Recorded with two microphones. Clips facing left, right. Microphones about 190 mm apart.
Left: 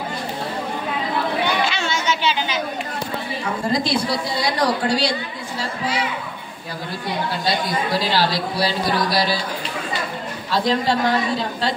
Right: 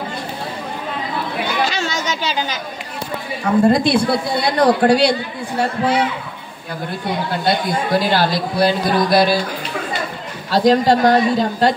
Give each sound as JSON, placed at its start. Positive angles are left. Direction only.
{"t": 1.6, "sound": "chatter", "side_deg": -40}
{"t": 3.7, "sound": "a woman's voice", "side_deg": -60}
{"t": 7.4, "sound": "speech", "side_deg": -50}
{"t": 10.5, "sound": "speech", "side_deg": -40}